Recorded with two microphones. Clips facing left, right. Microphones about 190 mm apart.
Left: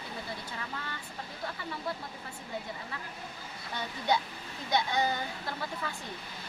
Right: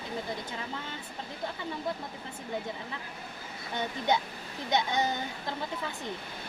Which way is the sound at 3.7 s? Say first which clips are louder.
Right 2 dB; 20° right (ahead or behind).